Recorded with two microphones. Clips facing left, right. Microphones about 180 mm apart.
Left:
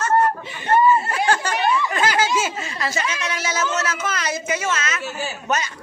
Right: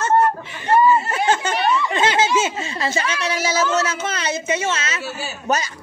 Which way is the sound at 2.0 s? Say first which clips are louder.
Right 2 dB; 25° right (ahead or behind).